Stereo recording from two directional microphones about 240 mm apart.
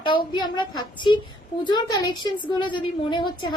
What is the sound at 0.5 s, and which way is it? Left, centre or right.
A woman's voice, centre.